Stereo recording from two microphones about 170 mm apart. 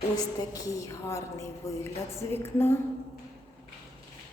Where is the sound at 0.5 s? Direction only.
15° left (ahead or behind).